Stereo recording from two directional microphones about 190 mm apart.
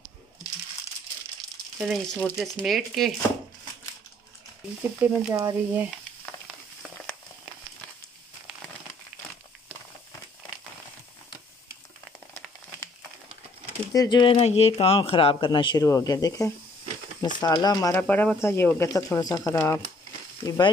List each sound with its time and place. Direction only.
1.8 s speech: centre (ahead or behind)
5.0 s speech: 15° right (ahead or behind)
13.9 s speech: 25° left (ahead or behind)
17.9 s speech: 10° left (ahead or behind)